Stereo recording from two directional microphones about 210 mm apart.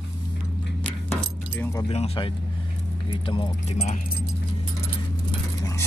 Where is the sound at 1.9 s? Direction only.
30° left (ahead or behind).